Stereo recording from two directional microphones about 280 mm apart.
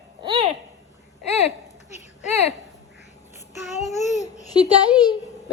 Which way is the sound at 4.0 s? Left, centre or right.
Left.